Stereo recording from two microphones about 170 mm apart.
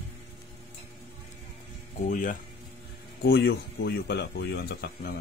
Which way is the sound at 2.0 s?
55° left (ahead or behind).